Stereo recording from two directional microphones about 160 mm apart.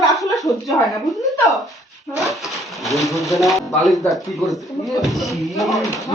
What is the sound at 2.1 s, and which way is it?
Speech, centre (ahead or behind).